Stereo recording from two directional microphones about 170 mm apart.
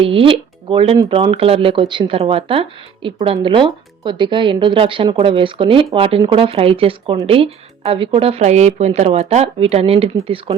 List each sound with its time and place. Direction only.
0.0 s speech: 30° right (ahead or behind)